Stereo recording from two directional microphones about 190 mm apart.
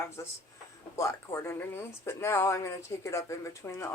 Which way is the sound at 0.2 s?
15° left (ahead or behind).